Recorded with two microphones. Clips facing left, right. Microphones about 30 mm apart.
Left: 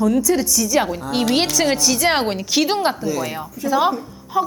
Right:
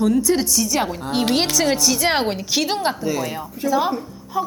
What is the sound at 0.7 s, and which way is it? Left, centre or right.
A woman's voice, centre.